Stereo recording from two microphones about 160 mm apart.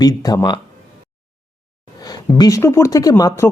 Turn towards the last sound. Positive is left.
turn(degrees=20)  # may be behind; listen again after turning